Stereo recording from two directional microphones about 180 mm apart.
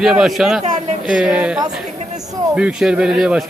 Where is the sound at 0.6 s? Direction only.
40° right (ahead or behind).